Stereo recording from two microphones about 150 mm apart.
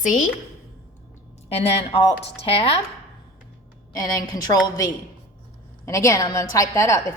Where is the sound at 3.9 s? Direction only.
25° left (ahead or behind).